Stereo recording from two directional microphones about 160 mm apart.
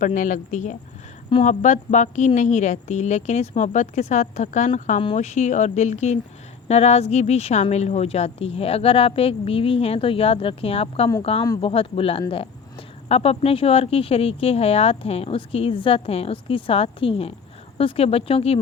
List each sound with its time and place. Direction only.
0.0 s speech: 55° left (ahead or behind); by 18.6 s 35° left (ahead or behind)